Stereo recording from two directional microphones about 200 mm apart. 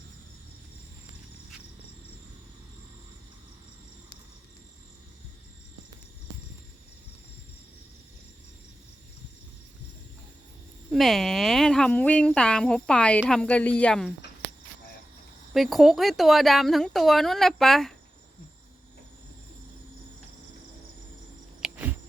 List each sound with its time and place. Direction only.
10.9 s a woman's voice: centre (ahead or behind)
15.5 s a woman's voice: centre (ahead or behind)
21.6 s cricket: 10° right (ahead or behind)